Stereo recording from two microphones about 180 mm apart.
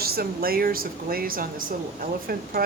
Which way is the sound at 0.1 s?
55° right (ahead or behind).